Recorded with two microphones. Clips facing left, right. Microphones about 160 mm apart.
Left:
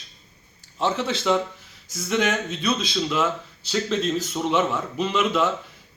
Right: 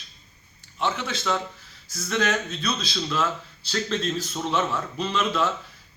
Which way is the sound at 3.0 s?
10° left (ahead or behind).